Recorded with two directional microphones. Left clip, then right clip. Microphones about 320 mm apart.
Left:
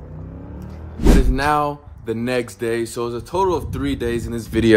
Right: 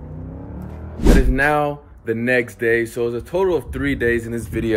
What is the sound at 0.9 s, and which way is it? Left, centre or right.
Music, centre.